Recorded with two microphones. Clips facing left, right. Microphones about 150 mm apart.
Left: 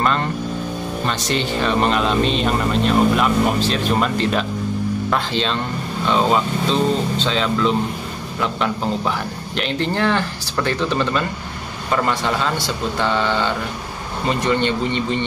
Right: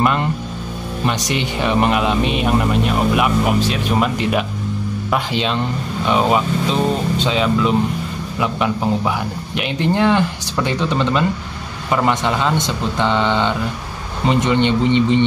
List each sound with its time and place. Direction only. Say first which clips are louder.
0.0 s a man's voice: right 2 dB; 15° right (ahead or behind)